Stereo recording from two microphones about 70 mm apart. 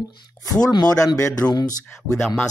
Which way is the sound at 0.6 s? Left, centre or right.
Left.